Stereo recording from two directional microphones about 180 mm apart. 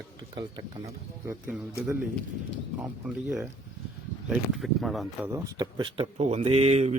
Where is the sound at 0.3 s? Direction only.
25° right (ahead or behind).